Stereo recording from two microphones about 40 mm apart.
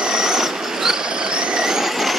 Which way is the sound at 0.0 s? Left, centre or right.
Centre.